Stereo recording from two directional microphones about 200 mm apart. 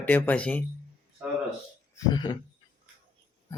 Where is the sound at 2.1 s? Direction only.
20° left (ahead or behind).